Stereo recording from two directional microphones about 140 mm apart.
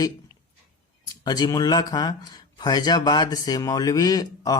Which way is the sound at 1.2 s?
30° left (ahead or behind).